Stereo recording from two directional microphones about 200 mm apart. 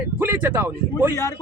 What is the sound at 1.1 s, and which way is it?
Speech, 15° left (ahead or behind).